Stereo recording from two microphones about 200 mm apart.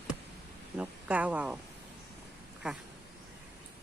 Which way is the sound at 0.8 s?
5° right (ahead or behind).